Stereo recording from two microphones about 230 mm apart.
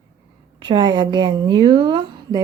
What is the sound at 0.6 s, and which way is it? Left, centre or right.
A woman's voice, centre.